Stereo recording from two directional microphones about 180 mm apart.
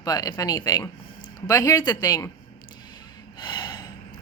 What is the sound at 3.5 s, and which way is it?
Gasp, 25° left (ahead or behind).